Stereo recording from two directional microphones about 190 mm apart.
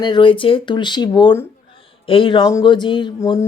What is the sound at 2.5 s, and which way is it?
Speech, 25° left (ahead or behind).